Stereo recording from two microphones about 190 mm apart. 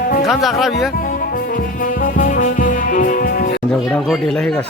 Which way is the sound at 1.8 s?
45° left (ahead or behind).